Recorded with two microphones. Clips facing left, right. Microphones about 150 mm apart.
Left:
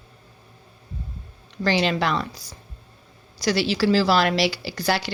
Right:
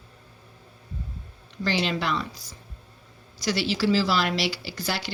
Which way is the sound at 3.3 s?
75° left (ahead or behind).